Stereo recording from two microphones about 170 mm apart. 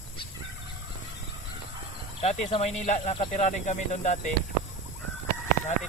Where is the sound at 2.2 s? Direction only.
40° left (ahead or behind).